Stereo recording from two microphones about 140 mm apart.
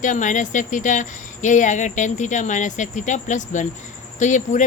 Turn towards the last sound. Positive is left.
turn(degrees=60)  # may be behind; listen again after turning